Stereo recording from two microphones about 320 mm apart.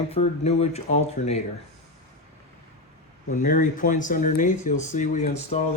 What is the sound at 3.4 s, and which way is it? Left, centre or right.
Speech, left.